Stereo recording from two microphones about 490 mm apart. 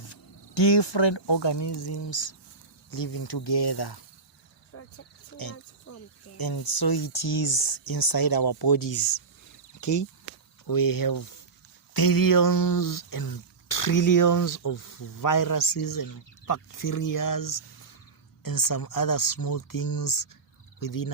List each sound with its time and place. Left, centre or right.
0.1 s speech: left
4.7 s insect: left
5.9 s cricket: left
6.3 s speech: left